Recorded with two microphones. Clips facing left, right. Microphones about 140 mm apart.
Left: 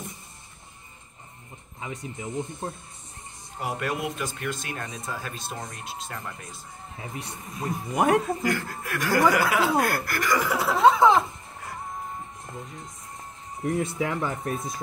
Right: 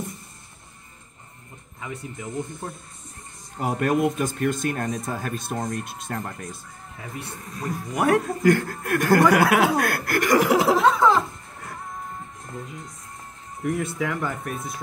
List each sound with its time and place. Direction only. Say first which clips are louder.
1.8 s speech: right 1 dB; 20° left (ahead or behind)
3.6 s speech: right 8 dB; 45° right (ahead or behind)
7.0 s speech: right 1 dB; 20° left (ahead or behind)
8.4 s a man's voice: right 8 dB; 50° right (ahead or behind); by 10.9 s 90° right
10.9 s speech: left 5 dB; 20° left (ahead or behind)
13.6 s speech: right 1 dB; 30° left (ahead or behind)